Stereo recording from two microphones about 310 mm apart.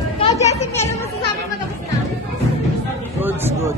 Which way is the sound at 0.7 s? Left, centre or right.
Centre.